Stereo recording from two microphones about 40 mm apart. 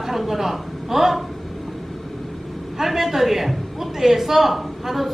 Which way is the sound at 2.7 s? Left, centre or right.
Centre.